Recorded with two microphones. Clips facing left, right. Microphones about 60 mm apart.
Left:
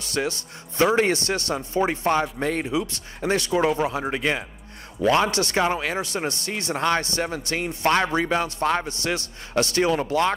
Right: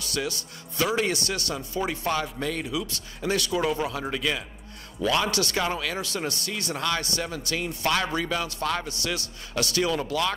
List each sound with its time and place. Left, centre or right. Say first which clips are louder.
0.0 s speech: left 4 dB; left